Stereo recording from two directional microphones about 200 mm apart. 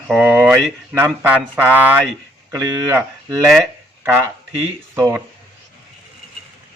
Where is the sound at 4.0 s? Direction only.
10° right (ahead or behind).